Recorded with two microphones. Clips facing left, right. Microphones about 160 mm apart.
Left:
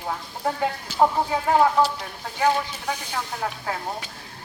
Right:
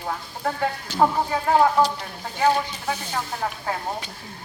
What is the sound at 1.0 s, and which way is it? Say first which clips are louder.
Speech: even; 5° left (ahead or behind).